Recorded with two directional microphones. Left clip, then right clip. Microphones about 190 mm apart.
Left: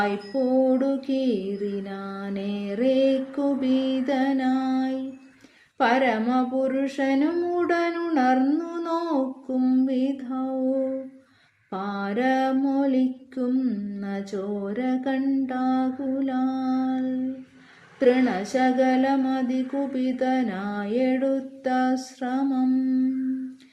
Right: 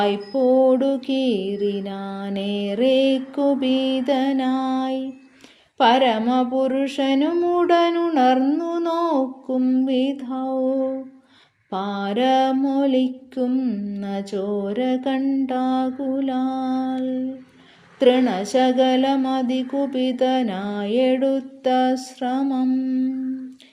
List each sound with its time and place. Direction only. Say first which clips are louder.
0.0 s mantra: right 5 dB; 25° right (ahead or behind)
18.0 s mantra: right 4 dB; 30° right (ahead or behind)